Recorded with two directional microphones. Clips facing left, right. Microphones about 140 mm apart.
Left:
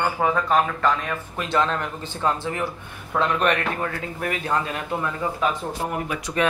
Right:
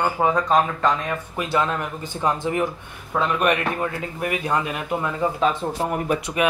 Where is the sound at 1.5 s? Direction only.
10° right (ahead or behind).